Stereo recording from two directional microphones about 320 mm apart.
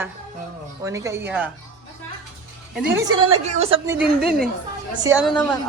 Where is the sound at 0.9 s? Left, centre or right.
Centre.